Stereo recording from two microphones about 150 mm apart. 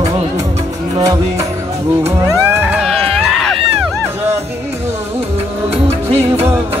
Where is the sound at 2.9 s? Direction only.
40° right (ahead or behind).